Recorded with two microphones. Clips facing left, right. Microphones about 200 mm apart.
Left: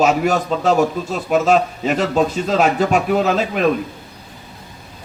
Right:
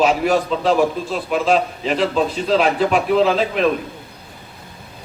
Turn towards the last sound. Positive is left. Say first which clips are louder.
# right 1 dB
turn(degrees=45)  # may be behind; listen again after turning